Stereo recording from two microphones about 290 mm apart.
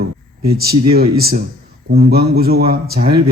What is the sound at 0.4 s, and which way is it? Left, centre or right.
Speech, right.